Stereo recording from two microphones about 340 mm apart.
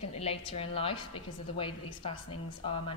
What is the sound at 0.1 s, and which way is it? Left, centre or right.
A woman's voice, centre.